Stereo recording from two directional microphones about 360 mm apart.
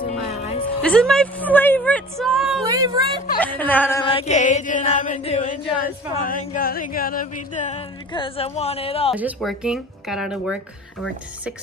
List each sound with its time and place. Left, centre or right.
0.0 s music: centre
0.8 s speech: centre
2.7 s speech: centre
3.3 s music: centre
9.1 s speech: centre